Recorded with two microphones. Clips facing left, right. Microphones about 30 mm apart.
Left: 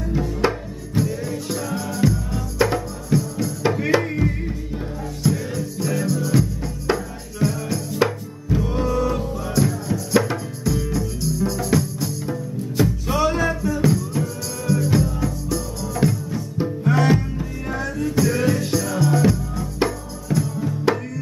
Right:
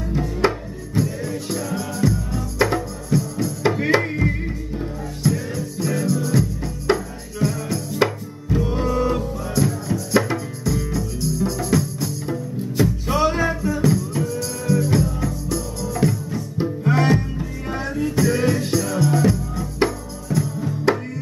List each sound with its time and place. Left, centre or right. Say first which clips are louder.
0.1 s music: right 1 dB; centre
3.7 s music: right 1 dB; centre
5.2 s music: even; centre
9.2 s music: even; centre
17.7 s music: right 1 dB; centre
18.1 s music: even; centre